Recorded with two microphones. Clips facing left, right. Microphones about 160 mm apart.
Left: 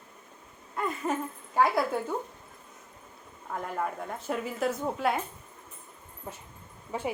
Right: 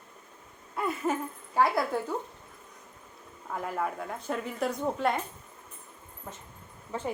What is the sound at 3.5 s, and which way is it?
A woman's voice, centre (ahead or behind).